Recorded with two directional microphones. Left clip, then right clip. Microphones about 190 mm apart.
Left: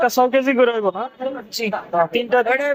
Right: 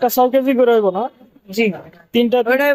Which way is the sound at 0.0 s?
30° right (ahead or behind).